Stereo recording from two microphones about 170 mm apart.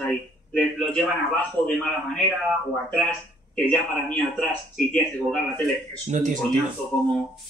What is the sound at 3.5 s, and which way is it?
Speech, 5° left (ahead or behind).